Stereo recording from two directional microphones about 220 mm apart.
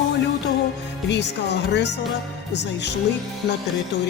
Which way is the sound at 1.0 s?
50° left (ahead or behind).